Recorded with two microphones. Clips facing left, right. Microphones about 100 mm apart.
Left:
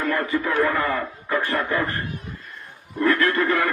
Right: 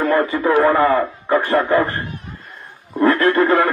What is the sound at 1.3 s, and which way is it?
Speech, 30° right (ahead or behind).